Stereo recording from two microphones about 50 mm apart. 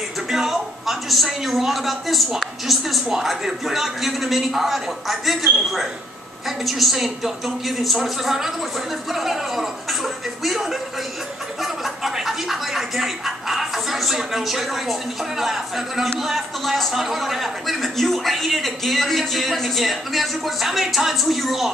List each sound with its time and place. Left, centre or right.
0.3 s speech: centre